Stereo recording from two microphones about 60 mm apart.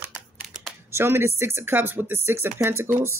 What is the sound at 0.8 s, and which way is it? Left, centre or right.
Speech, right.